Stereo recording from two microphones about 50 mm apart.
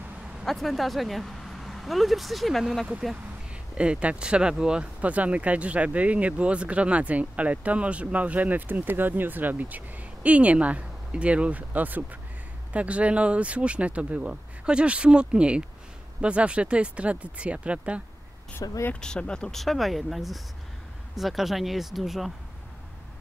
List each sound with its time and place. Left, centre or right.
0.5 s speech: centre
3.7 s speech: right
5.0 s speech: right
18.9 s speech: centre
19.5 s speech: centre